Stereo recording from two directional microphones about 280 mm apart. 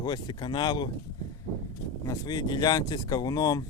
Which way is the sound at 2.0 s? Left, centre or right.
Centre.